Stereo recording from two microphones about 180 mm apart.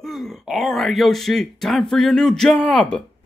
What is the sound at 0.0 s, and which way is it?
Laughter, centre (ahead or behind).